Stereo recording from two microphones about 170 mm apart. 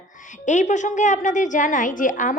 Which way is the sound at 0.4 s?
45° left (ahead or behind).